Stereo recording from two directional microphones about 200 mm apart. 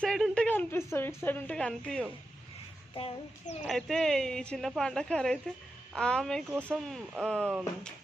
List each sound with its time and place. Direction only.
0.0 s a woman's voice: 5° left (ahead or behind)
2.9 s child singing: 30° left (ahead or behind)
3.6 s speech: centre (ahead or behind)